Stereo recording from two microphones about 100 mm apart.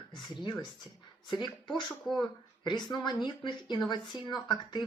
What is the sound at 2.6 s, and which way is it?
Speech, 50° left (ahead or behind).